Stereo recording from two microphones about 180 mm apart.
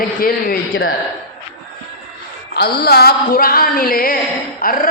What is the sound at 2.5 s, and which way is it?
Music, 65° left (ahead or behind).